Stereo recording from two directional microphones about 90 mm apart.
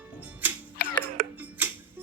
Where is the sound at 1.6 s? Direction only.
20° right (ahead or behind).